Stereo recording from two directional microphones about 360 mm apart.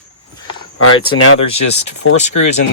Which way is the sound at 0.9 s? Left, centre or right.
Left.